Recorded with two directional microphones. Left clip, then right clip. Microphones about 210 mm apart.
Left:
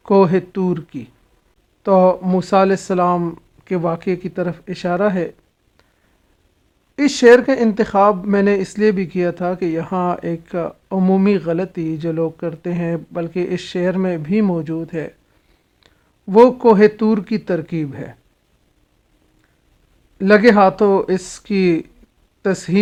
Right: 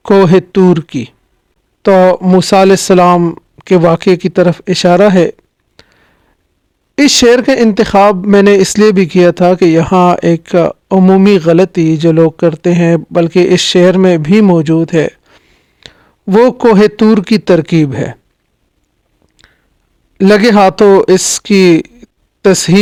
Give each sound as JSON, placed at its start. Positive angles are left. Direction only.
{"t": 0.0, "sound": "speech", "side_deg": -45}
{"t": 3.2, "sound": "speech", "side_deg": -35}
{"t": 3.6, "sound": "speech", "side_deg": -50}
{"t": 5.8, "sound": "a sound", "side_deg": -45}
{"t": 6.9, "sound": "a man's voice", "side_deg": -40}
{"t": 20.1, "sound": "speech", "side_deg": -45}